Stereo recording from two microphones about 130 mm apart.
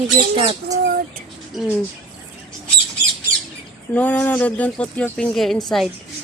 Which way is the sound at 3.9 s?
10° left (ahead or behind).